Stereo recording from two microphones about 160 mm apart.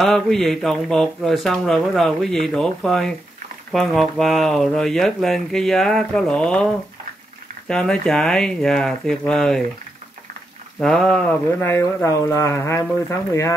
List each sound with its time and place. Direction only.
0.0 s speech: centre (ahead or behind)
10.8 s speech: 5° left (ahead or behind); by 13.6 s 20° left (ahead or behind)